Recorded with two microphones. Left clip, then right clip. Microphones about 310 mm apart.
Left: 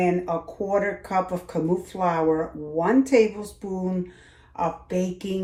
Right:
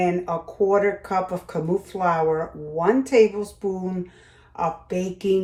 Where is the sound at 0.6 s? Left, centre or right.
Right.